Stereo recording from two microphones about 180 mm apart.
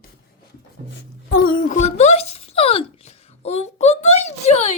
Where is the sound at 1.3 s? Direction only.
55° left (ahead or behind).